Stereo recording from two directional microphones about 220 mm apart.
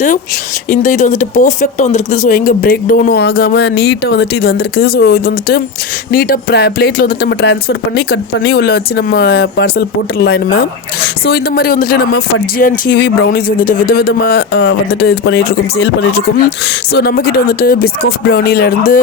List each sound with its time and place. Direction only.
0.7 s speech: 35° left (ahead or behind)
14.6 s speech: 65° left (ahead or behind)
15.1 s speech: 45° left (ahead or behind)